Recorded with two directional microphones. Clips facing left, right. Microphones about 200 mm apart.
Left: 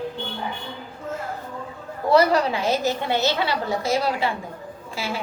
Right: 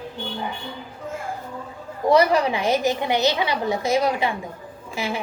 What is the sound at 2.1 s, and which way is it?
A woman's voice, 15° right (ahead or behind).